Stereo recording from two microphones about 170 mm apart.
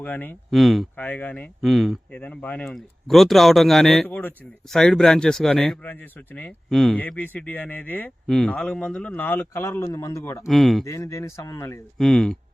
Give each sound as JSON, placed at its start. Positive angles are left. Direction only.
{"t": 0.0, "sound": "speech", "side_deg": 10}
{"t": 0.5, "sound": "speech", "side_deg": 0}
{"t": 10.4, "sound": "speech", "side_deg": 0}
{"t": 10.8, "sound": "speech", "side_deg": 20}
{"t": 11.9, "sound": "speech", "side_deg": 0}